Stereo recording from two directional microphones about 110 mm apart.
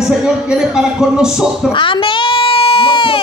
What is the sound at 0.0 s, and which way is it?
Speech, 5° right (ahead or behind).